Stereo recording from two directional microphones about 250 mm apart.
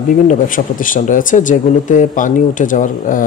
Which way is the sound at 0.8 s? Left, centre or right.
Left.